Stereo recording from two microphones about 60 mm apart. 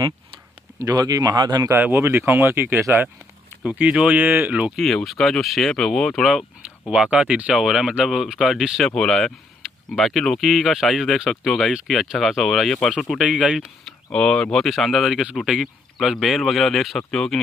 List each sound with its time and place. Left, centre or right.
0.7 s speech: right
1.6 s speech: right
2.0 s speech: right
3.6 s speech: right
4.7 s speech: centre
6.9 s speech: centre
7.5 s speech: centre
8.8 s speech: centre
13.2 s speech: centre
14.1 s speech: centre